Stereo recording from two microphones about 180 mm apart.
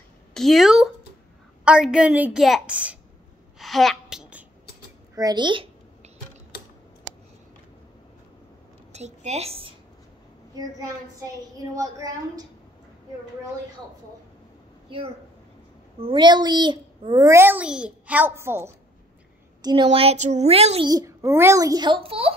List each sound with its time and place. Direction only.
0.3 s a woman's voice: centre (ahead or behind)
3.5 s a sound: centre (ahead or behind)
5.1 s a sound: 20° right (ahead or behind)
8.9 s a woman's voice: 40° right (ahead or behind)
10.5 s a woman's voice: 20° right (ahead or behind)
16.0 s a child's voice: 25° right (ahead or behind)
19.6 s a woman's voice: 25° right (ahead or behind)
20.9 s a child's voice: 15° right (ahead or behind)